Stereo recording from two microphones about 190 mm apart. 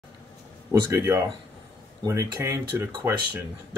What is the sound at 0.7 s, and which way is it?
Speech, 15° right (ahead or behind).